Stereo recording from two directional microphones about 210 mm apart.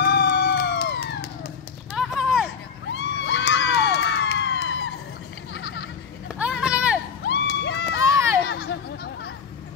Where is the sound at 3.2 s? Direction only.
55° left (ahead or behind).